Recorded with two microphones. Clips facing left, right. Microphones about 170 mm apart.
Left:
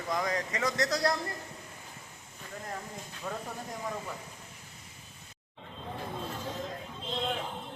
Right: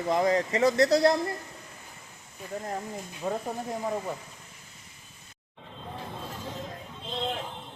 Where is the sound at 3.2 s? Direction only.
30° right (ahead or behind).